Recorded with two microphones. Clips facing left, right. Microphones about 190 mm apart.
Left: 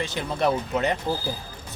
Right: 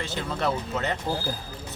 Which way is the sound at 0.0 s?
15° left (ahead or behind).